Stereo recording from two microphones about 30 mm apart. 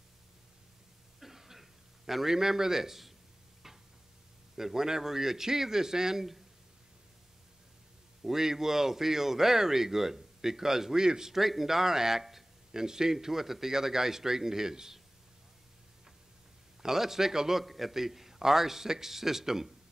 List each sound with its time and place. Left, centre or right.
1.2 s a sound: centre
2.3 s speech: centre
3.6 s tick-tock: centre
4.6 s speech: centre
8.2 s speech: centre
11.3 s a man's voice: centre
16.8 s speech: centre
17.6 s speech: centre